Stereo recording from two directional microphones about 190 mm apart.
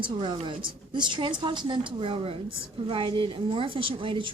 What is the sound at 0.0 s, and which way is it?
A woman's voice, 25° right (ahead or behind).